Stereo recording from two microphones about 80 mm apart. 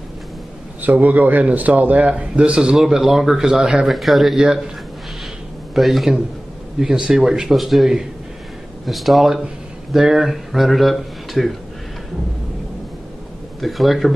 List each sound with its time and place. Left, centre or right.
0.8 s a man's voice: right; by 4.6 s centre
5.8 s speech: centre
13.6 s speech: centre